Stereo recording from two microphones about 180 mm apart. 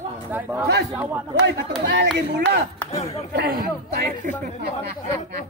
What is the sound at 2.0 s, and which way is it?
Speech, 65° right (ahead or behind).